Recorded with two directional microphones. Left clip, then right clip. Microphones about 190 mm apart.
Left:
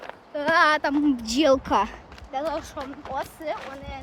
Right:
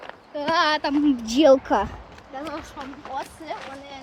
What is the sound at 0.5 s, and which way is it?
Speech, 15° left (ahead or behind).